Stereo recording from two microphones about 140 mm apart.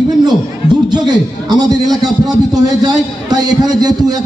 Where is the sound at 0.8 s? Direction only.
30° right (ahead or behind).